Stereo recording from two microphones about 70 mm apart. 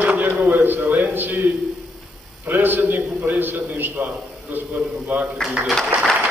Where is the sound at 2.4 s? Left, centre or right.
Right.